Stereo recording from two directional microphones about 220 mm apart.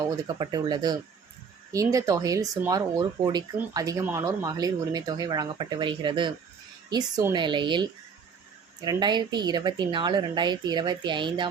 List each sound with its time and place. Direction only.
0.0 s speech: 20° right (ahead or behind)